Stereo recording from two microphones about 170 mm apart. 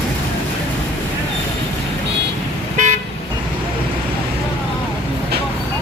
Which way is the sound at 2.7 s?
45° right (ahead or behind).